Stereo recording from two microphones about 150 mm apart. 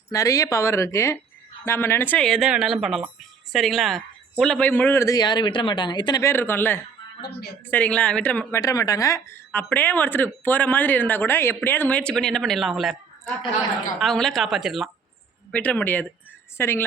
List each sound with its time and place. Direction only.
0.1 s a woman's voice: 25° left (ahead or behind)
6.2 s speech: 15° left (ahead or behind)
7.3 s a woman's voice: 90° left
7.7 s speech: 10° left (ahead or behind)
8.6 s speech: 25° left (ahead or behind); by 14.8 s centre (ahead or behind)
15.5 s speech: 10° left (ahead or behind)